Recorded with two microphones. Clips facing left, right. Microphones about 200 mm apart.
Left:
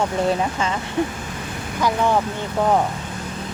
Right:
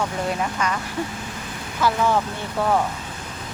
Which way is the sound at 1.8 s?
15° left (ahead or behind).